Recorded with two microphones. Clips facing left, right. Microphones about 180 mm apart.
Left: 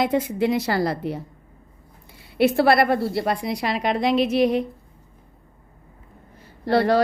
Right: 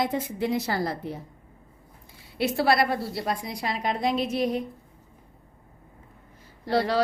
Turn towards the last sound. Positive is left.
turn(degrees=55)  # may be behind; listen again after turning